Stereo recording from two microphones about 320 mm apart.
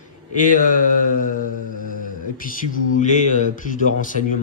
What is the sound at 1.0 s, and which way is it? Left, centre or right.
Speech, left.